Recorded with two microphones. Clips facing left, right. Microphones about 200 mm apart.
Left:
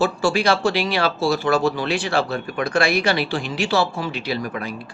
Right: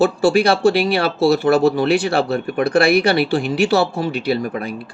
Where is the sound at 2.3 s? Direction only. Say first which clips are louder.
Right 6 dB; 35° right (ahead or behind).